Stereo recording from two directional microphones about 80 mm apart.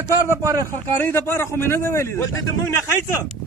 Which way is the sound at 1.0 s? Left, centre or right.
Left.